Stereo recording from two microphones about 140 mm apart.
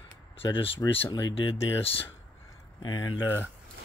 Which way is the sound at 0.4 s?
40° left (ahead or behind).